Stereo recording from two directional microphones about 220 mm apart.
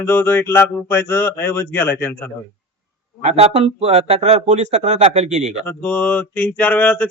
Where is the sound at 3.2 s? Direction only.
30° right (ahead or behind).